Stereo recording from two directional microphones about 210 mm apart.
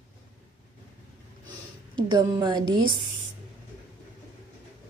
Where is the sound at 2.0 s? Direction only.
20° right (ahead or behind).